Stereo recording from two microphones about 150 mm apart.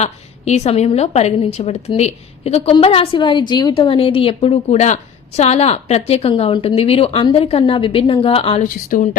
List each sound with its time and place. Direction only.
0.0 s a woman's voice: 45° left (ahead or behind)
8.6 s a woman's voice: 65° left (ahead or behind)